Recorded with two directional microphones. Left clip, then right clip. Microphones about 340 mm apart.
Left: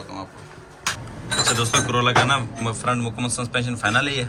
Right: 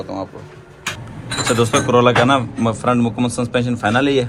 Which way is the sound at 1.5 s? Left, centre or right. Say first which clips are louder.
Right 7 dB; centre.